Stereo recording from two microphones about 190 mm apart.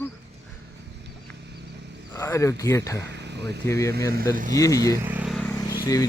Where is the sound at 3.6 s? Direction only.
15° left (ahead or behind).